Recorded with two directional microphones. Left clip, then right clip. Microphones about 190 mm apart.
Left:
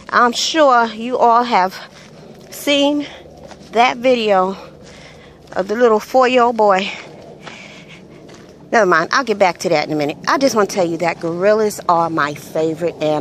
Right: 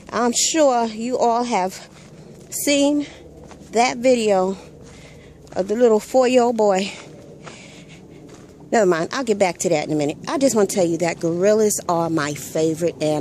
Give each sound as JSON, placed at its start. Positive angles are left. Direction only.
{"t": 0.0, "sound": "a woman's voice", "side_deg": -25}
{"t": 8.6, "sound": "a woman's voice", "side_deg": -25}